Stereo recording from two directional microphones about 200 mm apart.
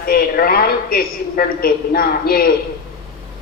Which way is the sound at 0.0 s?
50° left (ahead or behind).